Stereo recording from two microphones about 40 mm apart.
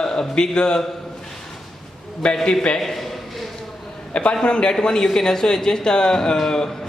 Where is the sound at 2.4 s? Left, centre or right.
Left.